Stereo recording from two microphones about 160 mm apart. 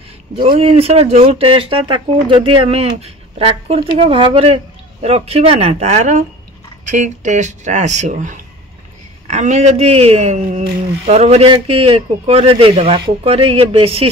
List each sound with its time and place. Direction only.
0.4 s speech: 35° right (ahead or behind)